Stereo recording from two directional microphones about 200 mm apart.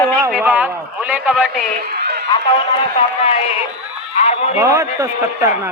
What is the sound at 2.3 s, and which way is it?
A man's voice, 20° left (ahead or behind).